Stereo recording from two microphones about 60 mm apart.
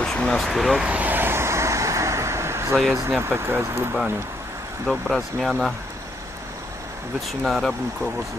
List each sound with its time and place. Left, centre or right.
0.0 s a sound: centre
0.8 s vehicle: right
3.1 s speech: right
4.8 s speech: centre
7.4 s speech: centre